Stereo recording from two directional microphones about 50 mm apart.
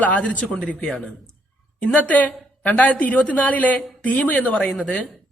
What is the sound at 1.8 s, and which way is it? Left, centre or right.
A woman's voice, left.